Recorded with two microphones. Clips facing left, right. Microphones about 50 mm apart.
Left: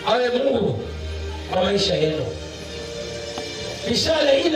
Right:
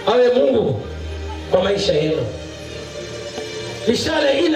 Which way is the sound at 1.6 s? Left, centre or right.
Right.